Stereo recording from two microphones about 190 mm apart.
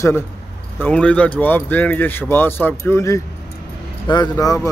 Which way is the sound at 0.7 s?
10° left (ahead or behind).